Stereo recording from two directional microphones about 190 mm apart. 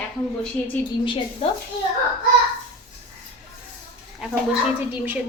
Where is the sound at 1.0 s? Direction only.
30° left (ahead or behind).